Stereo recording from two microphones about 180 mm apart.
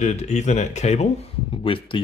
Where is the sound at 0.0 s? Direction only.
40° left (ahead or behind).